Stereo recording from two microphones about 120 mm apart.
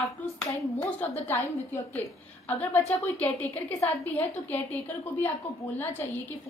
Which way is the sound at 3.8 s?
15° left (ahead or behind).